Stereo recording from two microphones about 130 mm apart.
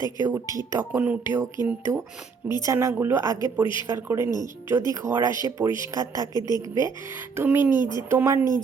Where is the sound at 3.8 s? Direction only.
20° right (ahead or behind).